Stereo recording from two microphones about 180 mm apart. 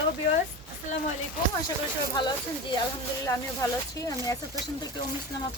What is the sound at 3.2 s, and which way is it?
Speech, 20° left (ahead or behind).